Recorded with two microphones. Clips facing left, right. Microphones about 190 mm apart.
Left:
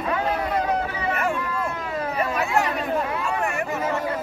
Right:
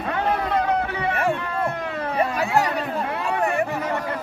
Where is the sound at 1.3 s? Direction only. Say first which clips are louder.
Right 2 dB; 60° right (ahead or behind).